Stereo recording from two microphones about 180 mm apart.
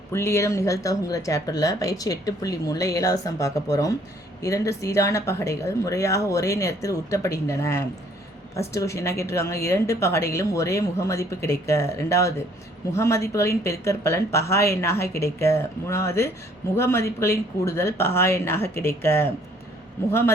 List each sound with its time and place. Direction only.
0.1 s a woman's voice: 15° left (ahead or behind)